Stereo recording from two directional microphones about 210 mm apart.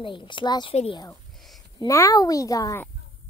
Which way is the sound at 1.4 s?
Centre (ahead or behind).